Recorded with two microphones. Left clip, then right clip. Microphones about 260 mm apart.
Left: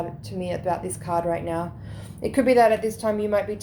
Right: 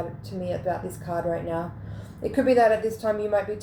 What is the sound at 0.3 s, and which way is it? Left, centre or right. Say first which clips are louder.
A woman's voice: left 2 dB; left.